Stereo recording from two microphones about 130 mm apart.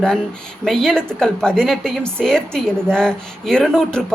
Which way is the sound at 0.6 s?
5° left (ahead or behind).